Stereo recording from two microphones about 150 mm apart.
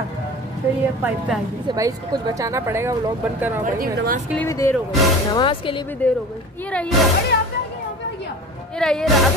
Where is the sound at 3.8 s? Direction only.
70° right (ahead or behind).